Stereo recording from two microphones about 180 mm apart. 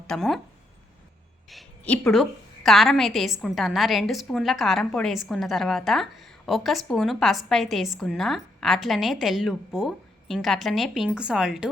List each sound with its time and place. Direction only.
0.1 s a woman's voice: centre (ahead or behind)
1.5 s a woman's voice: 5° left (ahead or behind)